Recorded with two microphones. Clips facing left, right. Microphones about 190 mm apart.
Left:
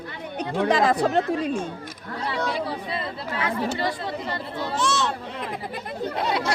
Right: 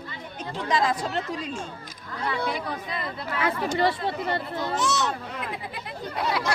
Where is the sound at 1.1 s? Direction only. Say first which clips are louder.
Left 8 dB; 50° left (ahead or behind).